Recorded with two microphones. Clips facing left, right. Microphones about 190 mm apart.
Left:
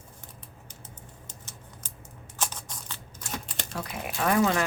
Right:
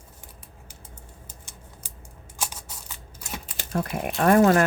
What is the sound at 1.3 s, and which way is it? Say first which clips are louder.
Scissors: even; 10° right (ahead or behind).